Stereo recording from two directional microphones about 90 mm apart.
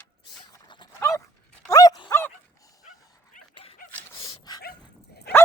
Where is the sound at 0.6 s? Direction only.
60° left (ahead or behind).